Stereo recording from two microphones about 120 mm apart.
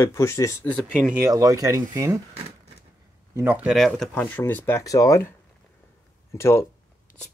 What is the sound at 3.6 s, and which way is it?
Speech, centre (ahead or behind).